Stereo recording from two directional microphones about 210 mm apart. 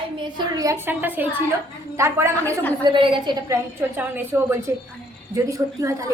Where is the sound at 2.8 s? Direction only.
25° right (ahead or behind).